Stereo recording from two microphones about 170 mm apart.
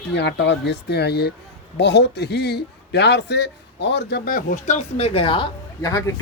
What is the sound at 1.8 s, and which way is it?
A man's voice, 85° left.